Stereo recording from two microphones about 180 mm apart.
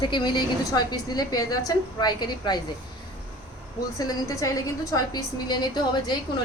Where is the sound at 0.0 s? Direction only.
25° left (ahead or behind).